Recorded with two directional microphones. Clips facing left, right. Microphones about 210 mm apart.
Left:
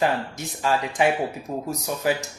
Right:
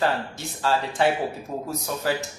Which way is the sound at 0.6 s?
15° left (ahead or behind).